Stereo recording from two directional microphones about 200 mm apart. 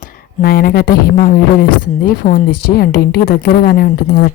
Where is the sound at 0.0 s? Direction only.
50° left (ahead or behind).